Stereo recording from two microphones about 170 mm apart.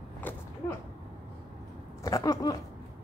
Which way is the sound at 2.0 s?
20° left (ahead or behind).